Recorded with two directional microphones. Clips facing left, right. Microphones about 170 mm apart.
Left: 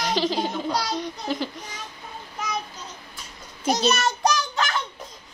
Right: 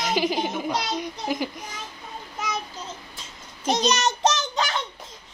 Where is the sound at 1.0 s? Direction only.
10° right (ahead or behind).